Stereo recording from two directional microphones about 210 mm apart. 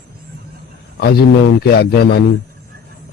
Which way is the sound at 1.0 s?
50° left (ahead or behind).